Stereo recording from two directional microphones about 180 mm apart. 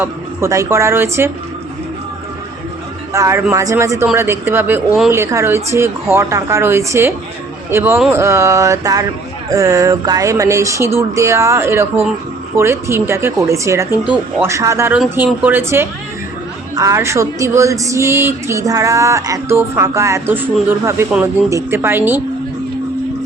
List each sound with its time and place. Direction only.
0.0 s a woman's voice: 15° right (ahead or behind)
3.1 s a woman's voice: 15° right (ahead or behind)